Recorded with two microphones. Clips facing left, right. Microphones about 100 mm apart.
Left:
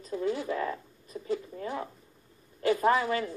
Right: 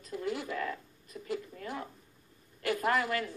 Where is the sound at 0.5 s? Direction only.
30° left (ahead or behind).